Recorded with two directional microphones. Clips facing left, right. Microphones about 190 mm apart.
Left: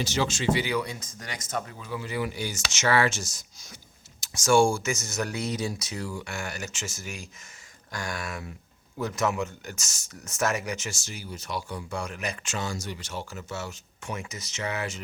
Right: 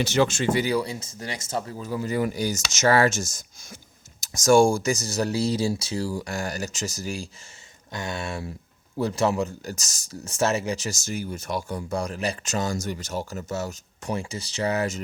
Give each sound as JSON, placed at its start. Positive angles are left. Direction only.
{"t": 0.0, "sound": "speech", "side_deg": -60}
{"t": 7.9, "sound": "speech", "side_deg": -25}